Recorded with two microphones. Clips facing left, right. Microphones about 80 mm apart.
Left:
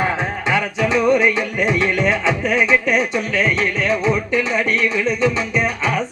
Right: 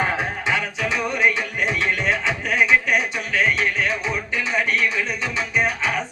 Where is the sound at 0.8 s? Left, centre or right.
Left.